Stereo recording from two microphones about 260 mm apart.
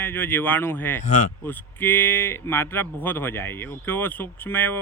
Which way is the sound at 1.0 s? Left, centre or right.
Left.